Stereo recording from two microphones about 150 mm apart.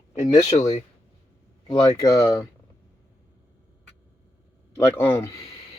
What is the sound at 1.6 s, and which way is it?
Speech, 35° left (ahead or behind).